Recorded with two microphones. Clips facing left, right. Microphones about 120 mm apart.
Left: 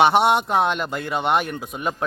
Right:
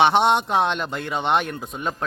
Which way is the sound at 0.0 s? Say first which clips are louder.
Left 1 dB; 5° left (ahead or behind).